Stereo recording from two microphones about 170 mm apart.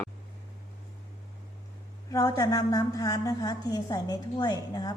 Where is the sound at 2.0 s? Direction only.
20° left (ahead or behind).